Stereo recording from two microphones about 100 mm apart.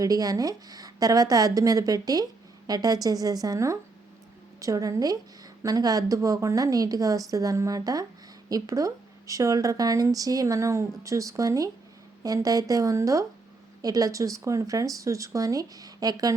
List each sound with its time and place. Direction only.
0.0 s a woman's voice: 40° right (ahead or behind)